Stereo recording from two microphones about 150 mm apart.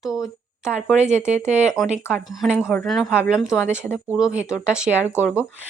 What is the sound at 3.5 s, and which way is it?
Speech, 15° left (ahead or behind).